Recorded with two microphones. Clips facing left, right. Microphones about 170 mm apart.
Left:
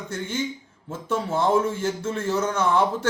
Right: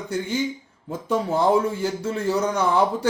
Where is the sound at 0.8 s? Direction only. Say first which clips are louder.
Right 3 dB; 15° right (ahead or behind).